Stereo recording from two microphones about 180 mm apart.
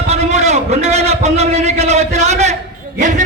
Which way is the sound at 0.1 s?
40° right (ahead or behind).